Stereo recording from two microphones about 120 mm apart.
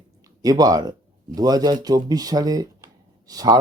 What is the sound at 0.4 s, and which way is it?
Speech, 30° right (ahead or behind).